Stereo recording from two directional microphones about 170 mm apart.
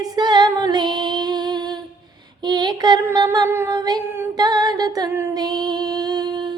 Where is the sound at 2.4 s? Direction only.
25° right (ahead or behind).